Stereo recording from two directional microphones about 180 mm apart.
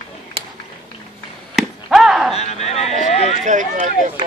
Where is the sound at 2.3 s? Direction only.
35° left (ahead or behind).